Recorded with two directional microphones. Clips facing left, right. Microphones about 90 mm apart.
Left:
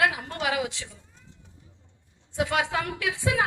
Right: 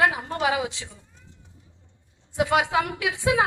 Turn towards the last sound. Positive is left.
turn(degrees=-15)  # may be behind; listen again after turning